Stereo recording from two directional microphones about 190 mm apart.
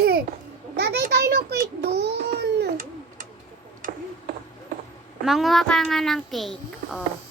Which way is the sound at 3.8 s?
45° right (ahead or behind).